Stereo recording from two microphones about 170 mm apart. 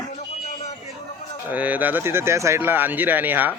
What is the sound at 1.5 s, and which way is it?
Speech, 10° right (ahead or behind).